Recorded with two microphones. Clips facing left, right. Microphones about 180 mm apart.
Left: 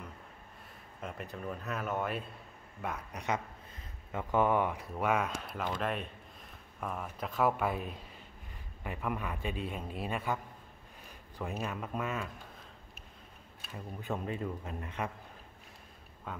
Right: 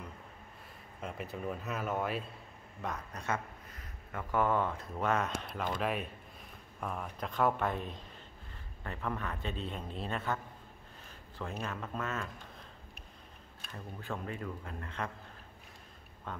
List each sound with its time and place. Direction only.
1.0 s speech: 5° right (ahead or behind); by 12.3 s 10° left (ahead or behind)
14.0 s speech: 20° left (ahead or behind)
16.3 s speech: 5° left (ahead or behind)